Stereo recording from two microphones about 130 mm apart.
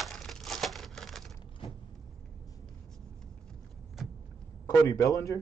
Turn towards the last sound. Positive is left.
turn(degrees=25)  # may be behind; listen again after turning